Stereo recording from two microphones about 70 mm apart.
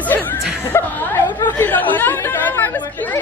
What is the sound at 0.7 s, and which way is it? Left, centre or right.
Speech, left.